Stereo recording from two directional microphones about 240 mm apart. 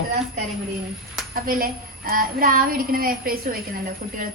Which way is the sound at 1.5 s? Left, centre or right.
Right.